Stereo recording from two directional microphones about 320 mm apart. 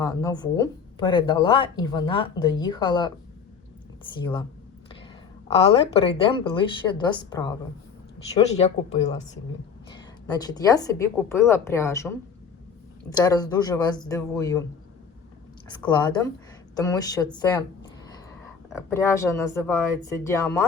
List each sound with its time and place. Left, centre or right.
0.0 s speech: centre
4.2 s speech: centre
5.5 s speech: centre
15.8 s speech: centre
18.7 s speech: centre